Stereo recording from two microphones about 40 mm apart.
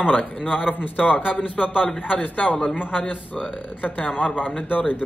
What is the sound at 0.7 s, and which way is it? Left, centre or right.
Speech, left.